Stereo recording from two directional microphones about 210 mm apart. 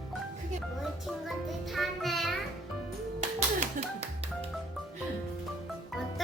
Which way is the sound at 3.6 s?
30° right (ahead or behind).